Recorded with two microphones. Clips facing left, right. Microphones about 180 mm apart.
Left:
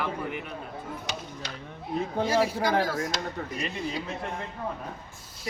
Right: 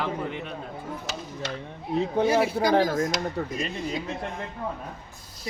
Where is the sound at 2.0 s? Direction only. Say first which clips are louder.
Right 3 dB; 20° right (ahead or behind).